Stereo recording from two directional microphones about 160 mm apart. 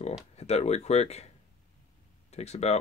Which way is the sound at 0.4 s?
45° left (ahead or behind).